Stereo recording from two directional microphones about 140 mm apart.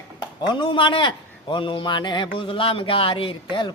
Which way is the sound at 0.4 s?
35° left (ahead or behind).